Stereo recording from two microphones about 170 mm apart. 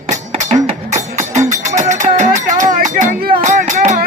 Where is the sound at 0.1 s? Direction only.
40° right (ahead or behind).